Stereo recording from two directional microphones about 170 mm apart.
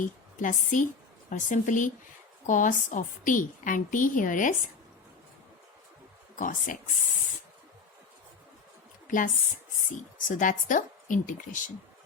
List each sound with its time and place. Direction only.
0.0 s a woman's voice: 50° left (ahead or behind)
6.4 s a woman's voice: 50° left (ahead or behind)
9.0 s a woman's voice: 50° left (ahead or behind)